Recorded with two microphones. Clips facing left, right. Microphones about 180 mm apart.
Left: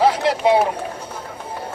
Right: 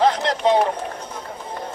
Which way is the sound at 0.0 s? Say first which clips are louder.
Left 2 dB; 10° left (ahead or behind).